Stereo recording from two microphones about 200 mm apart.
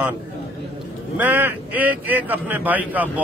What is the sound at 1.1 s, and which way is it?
Speech, 10° right (ahead or behind).